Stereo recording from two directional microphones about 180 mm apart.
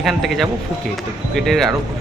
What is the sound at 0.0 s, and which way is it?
Speech, centre (ahead or behind).